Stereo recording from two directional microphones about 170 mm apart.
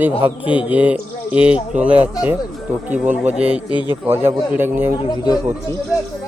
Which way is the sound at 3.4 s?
35° right (ahead or behind).